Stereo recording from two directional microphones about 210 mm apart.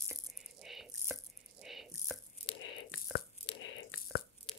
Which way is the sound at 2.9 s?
65° left (ahead or behind).